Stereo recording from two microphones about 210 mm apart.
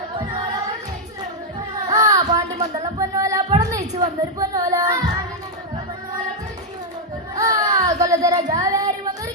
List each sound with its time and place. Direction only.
1.9 s music: 15° right (ahead or behind)
7.3 s a sound: 15° right (ahead or behind)
8.5 s child singing: 15° right (ahead or behind)